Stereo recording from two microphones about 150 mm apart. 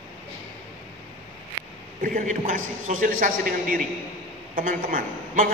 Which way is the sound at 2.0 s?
65° right (ahead or behind).